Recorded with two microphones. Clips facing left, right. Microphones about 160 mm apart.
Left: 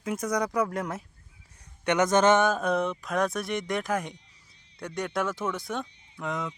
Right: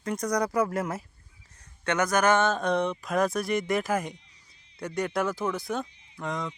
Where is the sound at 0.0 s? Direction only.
5° left (ahead or behind).